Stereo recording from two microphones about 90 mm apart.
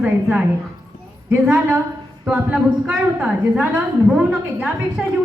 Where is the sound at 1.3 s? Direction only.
25° right (ahead or behind).